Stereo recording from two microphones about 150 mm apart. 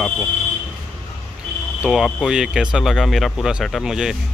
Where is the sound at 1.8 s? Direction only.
5° right (ahead or behind).